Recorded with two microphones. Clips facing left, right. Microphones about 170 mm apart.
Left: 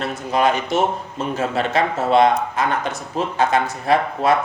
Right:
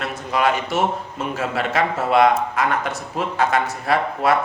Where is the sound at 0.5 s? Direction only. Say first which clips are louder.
Left 2 dB; 20° left (ahead or behind).